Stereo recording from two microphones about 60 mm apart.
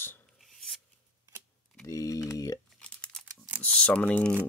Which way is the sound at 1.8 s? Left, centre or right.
Left.